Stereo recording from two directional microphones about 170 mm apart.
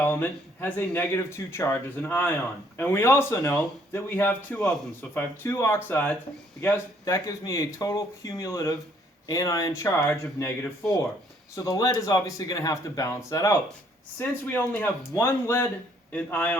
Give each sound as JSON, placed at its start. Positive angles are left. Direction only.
{"t": 0.0, "sound": "speech", "side_deg": 10}